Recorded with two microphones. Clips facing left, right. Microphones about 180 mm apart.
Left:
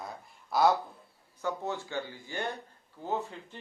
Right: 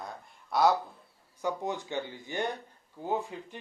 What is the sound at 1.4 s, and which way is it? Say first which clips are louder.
Speech: right 1 dB; 15° right (ahead or behind).